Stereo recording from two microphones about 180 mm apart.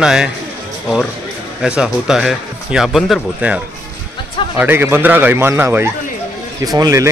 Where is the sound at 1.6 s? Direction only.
5° right (ahead or behind).